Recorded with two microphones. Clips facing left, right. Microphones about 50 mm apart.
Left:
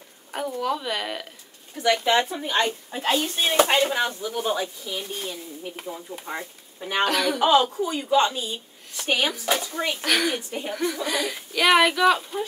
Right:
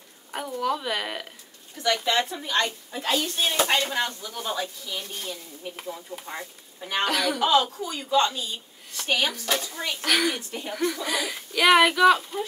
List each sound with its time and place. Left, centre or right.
0.3 s speech: centre
2.0 s speech: centre; by 3.6 s left
3.6 s speech: centre
7.3 s speech: left; by 12.4 s centre